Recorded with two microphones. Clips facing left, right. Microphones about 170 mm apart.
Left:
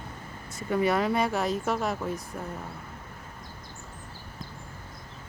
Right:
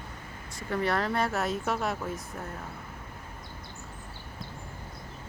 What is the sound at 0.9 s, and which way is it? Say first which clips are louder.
Speech: left 3 dB; centre (ahead or behind).